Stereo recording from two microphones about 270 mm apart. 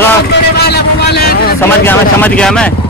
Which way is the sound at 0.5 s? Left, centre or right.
Left.